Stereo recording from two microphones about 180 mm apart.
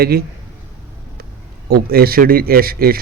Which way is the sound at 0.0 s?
60° right (ahead or behind).